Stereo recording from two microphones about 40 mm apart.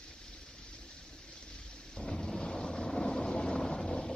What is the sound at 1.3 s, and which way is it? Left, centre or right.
Boat, centre.